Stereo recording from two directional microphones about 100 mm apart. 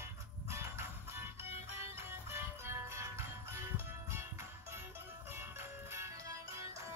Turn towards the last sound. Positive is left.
turn(degrees=-30)  # may be behind; listen again after turning